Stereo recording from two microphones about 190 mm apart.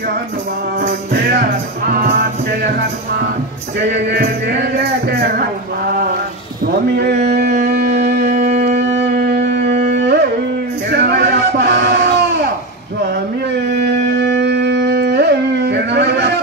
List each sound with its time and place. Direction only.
0.7 s music: 55° right (ahead or behind)
1.9 s speech: 50° right (ahead or behind)
4.1 s music: 60° right (ahead or behind)
5.2 s speech: 50° right (ahead or behind)
7.7 s music: 55° right (ahead or behind)
8.3 s music: 40° right (ahead or behind)
8.7 s music: 65° right (ahead or behind)
14.1 s a sound: 65° right (ahead or behind)